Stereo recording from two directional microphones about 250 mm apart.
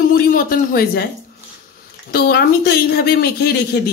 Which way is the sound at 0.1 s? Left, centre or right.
Left.